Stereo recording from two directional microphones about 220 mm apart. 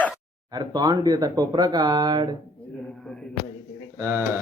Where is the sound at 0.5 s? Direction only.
20° right (ahead or behind).